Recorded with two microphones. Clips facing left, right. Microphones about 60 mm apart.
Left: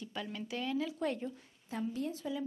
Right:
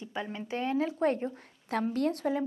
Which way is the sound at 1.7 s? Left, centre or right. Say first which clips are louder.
Right 8 dB; right.